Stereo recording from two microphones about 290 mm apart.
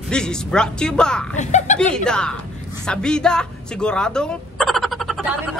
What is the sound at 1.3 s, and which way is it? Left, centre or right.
Speech, left.